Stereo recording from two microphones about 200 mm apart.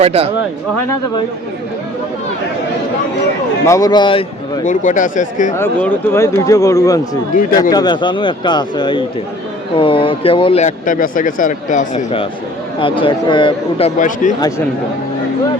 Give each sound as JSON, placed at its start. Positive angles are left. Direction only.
{"t": 0.0, "sound": "speech", "side_deg": -30}
{"t": 3.7, "sound": "speech", "side_deg": 20}
{"t": 4.6, "sound": "speech", "side_deg": 40}
{"t": 5.5, "sound": "speech", "side_deg": 10}
{"t": 7.3, "sound": "speech", "side_deg": 45}
{"t": 7.7, "sound": "speech", "side_deg": 20}
{"t": 12.8, "sound": "speech", "side_deg": 25}